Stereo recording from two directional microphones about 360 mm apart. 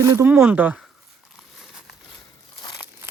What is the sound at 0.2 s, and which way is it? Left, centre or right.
Speech, centre.